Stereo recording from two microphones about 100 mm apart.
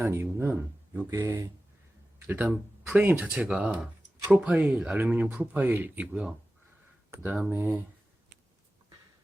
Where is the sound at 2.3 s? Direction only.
20° right (ahead or behind).